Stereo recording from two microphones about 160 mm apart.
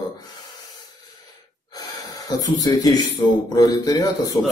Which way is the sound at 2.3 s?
25° left (ahead or behind).